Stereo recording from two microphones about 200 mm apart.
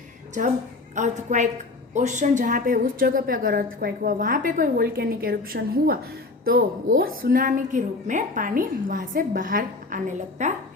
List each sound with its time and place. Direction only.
0.9 s a woman's voice: 35° right (ahead or behind)